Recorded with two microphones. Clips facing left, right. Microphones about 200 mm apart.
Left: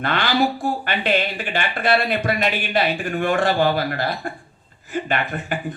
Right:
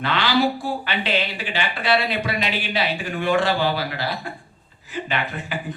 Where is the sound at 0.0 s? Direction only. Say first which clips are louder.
Even; 50° left (ahead or behind).